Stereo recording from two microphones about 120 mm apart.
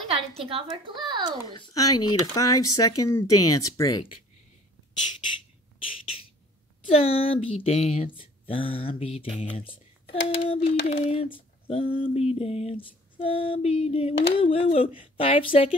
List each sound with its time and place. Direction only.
0.1 s a woman's voice: 55° right (ahead or behind)
1.5 s speech: 35° left (ahead or behind)
6.9 s speech: 55° left (ahead or behind)
8.2 s speech: 50° left (ahead or behind)